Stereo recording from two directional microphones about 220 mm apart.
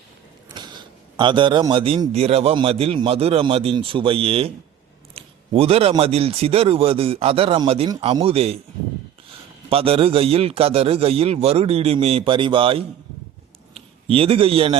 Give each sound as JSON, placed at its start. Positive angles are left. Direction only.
{"t": 1.1, "sound": "a man's voice", "side_deg": -20}
{"t": 9.6, "sound": "a man's voice", "side_deg": -25}